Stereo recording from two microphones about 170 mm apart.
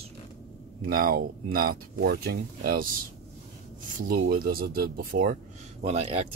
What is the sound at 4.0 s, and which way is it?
Speech, 55° right (ahead or behind).